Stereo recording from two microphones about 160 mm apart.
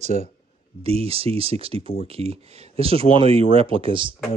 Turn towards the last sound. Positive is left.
turn(degrees=-30)  # may be behind; listen again after turning